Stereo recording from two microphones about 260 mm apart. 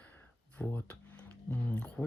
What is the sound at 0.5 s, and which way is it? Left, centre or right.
Speech, centre.